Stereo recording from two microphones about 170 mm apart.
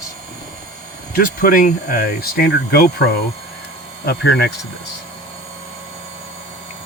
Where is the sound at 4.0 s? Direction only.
70° left (ahead or behind).